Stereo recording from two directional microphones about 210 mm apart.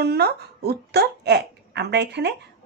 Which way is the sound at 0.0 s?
50° right (ahead or behind).